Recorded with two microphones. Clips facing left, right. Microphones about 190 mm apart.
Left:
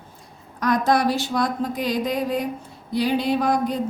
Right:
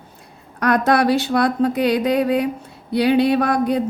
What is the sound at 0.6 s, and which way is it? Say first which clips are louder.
Speech: right 3 dB; 65° right (ahead or behind).